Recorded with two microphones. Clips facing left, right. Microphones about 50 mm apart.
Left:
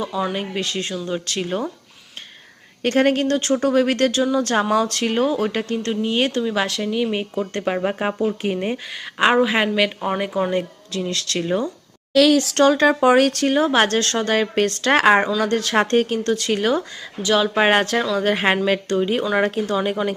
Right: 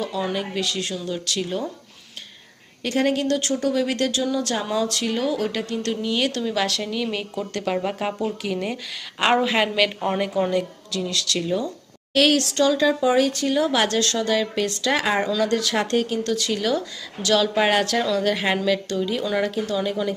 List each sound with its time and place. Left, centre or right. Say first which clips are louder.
0.0 s speech: left 2 dB; centre
0.3 s speech: left 1 dB; left
2.8 s speech: left 4 dB; left
9.1 s speech: left 3 dB; centre
10.5 s speech: left 1 dB; left
12.5 s speech: left 4 dB; left
13.6 s speech: left 3 dB; left
17.2 s speech: left 2 dB; left